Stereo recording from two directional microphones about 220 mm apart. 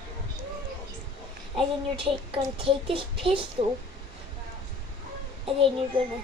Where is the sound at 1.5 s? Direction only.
25° right (ahead or behind).